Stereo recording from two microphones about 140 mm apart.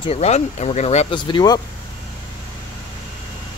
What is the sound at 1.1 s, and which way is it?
Speech, 35° left (ahead or behind).